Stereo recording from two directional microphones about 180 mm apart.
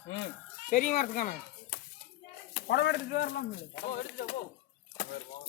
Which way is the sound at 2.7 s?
65° left (ahead or behind).